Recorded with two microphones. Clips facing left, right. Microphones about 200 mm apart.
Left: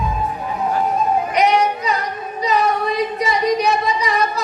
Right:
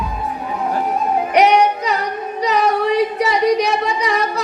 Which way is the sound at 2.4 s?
70° right (ahead or behind).